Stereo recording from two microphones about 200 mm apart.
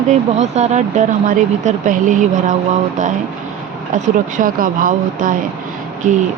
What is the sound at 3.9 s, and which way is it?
Speech, 40° right (ahead or behind).